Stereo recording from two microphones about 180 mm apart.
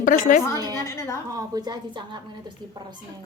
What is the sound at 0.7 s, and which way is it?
Speech, 15° left (ahead or behind).